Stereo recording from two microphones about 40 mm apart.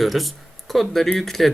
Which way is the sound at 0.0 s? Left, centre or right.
Centre.